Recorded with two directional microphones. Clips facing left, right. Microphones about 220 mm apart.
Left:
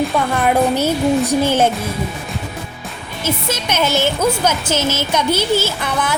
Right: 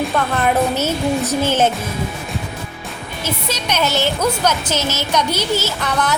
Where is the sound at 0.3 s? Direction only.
10° left (ahead or behind).